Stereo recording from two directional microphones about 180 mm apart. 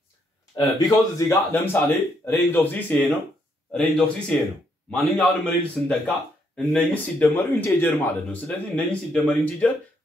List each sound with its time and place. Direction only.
0.6 s speech: 20° left (ahead or behind)